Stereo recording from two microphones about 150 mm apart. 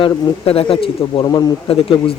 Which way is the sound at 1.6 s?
40° left (ahead or behind).